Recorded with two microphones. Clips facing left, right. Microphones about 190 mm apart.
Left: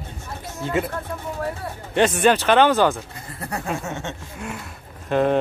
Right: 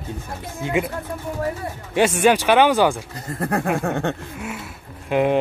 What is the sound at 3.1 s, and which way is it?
Speech, 50° right (ahead or behind).